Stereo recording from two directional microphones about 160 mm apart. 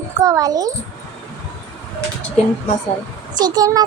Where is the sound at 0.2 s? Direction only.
25° right (ahead or behind).